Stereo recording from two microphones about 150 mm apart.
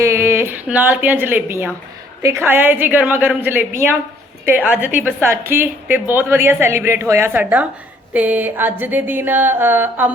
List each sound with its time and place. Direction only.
0.0 s a woman's voice: 15° right (ahead or behind)